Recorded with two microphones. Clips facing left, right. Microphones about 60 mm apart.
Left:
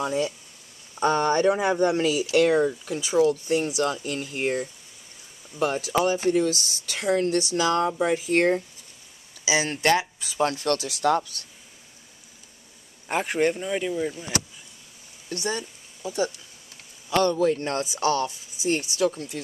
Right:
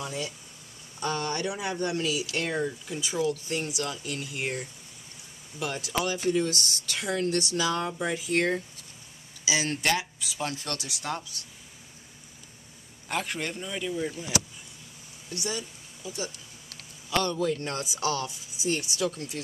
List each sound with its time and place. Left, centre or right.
0.0 s speech: left
2.3 s speech: left
6.2 s speech: left
6.5 s speech: right
7.0 s speech: left
9.4 s speech: left
11.1 s speech: left
13.1 s speech: left
15.2 s speech: left
18.6 s speech: left